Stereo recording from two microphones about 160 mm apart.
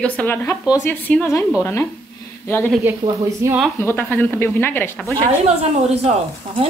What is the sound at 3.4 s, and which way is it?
Speech, 15° right (ahead or behind).